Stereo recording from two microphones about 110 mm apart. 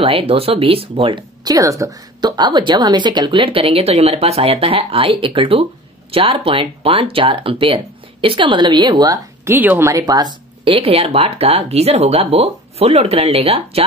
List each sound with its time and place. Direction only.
0.0 s speech: 55° right (ahead or behind)
1.4 s speech: 35° right (ahead or behind)
2.2 s speech: 40° right (ahead or behind)
9.5 s speech: 20° right (ahead or behind); by 10.7 s 40° right (ahead or behind)
10.7 s speech: 60° right (ahead or behind)